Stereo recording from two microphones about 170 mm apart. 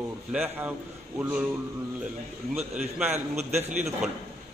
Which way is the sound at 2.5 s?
10° right (ahead or behind).